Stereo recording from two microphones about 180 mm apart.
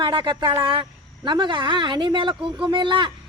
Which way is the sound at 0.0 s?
25° right (ahead or behind).